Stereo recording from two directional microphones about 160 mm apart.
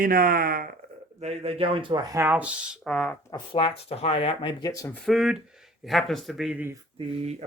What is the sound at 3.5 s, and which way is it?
Speech, 35° left (ahead or behind).